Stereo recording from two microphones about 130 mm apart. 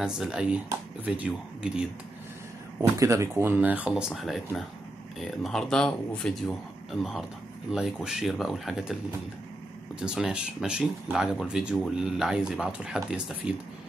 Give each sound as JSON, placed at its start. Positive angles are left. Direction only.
{"t": 0.0, "sound": "speech", "side_deg": -5}
{"t": 3.0, "sound": "speech", "side_deg": -25}
{"t": 3.9, "sound": "speech", "side_deg": 0}
{"t": 9.9, "sound": "speech", "side_deg": -5}